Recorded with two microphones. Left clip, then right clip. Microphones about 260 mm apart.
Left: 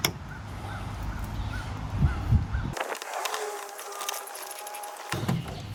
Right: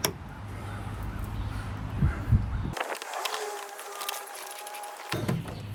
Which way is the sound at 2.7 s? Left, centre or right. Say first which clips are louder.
Left 1 dB; centre.